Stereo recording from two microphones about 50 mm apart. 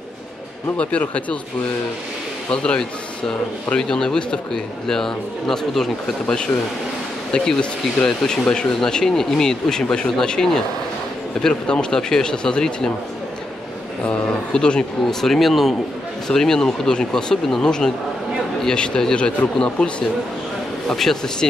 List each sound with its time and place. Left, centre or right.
0.7 s speech: left
2.5 s speech: centre
8.0 s speech: centre
14.0 s speech: left; by 21.5 s centre